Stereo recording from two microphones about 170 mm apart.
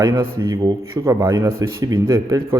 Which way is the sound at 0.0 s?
15° right (ahead or behind).